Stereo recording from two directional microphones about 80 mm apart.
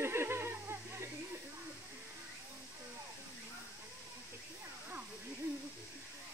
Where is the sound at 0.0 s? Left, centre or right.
Right.